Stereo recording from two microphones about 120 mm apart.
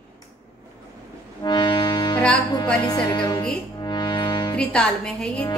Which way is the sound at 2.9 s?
35° left (ahead or behind).